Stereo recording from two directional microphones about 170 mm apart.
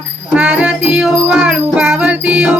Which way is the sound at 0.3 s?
5° right (ahead or behind).